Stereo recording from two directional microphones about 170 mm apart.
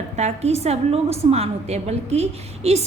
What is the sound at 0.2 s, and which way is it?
A woman's voice, 40° right (ahead or behind).